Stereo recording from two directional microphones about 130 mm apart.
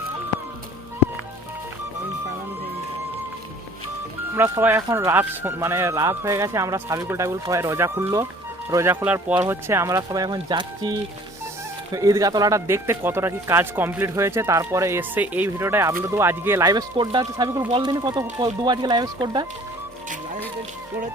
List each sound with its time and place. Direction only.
4.4 s speech: 20° right (ahead or behind); by 11.0 s 35° right (ahead or behind)
11.9 s speech: 25° right (ahead or behind)
16.6 s speech: 35° right (ahead or behind)
17.7 s speech: 40° right (ahead or behind)
17.9 s speech: 30° right (ahead or behind)